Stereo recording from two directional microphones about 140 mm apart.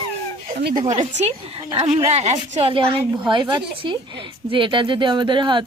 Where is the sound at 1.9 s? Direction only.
50° right (ahead or behind).